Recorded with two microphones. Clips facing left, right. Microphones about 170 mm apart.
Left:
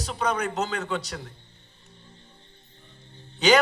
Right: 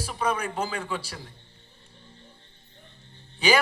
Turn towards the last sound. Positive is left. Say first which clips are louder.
# left 3 dB
turn(degrees=-10)  # may be behind; listen again after turning